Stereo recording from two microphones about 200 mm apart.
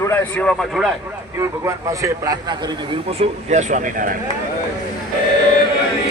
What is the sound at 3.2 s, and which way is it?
Speech, 35° right (ahead or behind).